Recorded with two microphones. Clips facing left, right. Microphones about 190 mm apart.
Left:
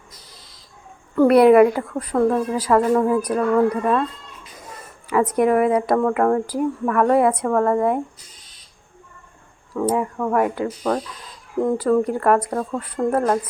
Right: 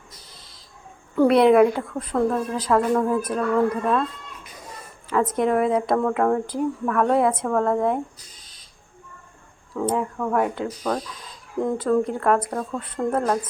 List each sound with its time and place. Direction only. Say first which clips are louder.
1.1 s speech: left 3 dB; 5° left (ahead or behind)
3.2 s speech: left 4 dB; 15° left (ahead or behind)
3.8 s speech: left 2 dB; 5° left (ahead or behind)
9.7 s speech: left 3 dB; 5° left (ahead or behind)